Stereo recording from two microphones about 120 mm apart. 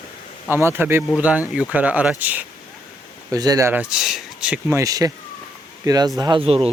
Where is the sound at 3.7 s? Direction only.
10° right (ahead or behind).